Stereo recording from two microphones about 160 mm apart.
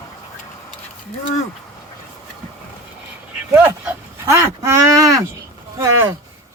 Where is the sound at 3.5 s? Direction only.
10° right (ahead or behind).